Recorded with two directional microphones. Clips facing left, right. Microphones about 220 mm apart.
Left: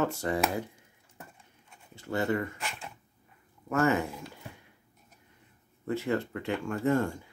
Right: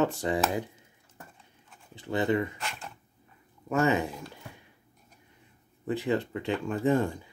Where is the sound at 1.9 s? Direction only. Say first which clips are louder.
Right 2 dB; 15° right (ahead or behind).